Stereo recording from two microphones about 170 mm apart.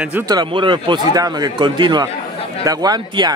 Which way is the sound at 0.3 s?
25° right (ahead or behind).